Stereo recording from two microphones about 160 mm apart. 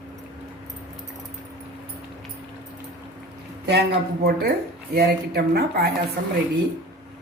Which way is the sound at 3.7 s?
90° right.